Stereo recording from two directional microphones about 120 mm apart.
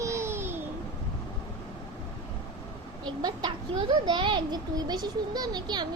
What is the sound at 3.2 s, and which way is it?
A child's voice, 35° right (ahead or behind).